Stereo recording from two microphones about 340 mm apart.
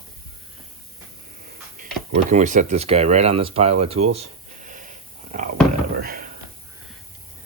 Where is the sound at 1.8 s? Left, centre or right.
Right.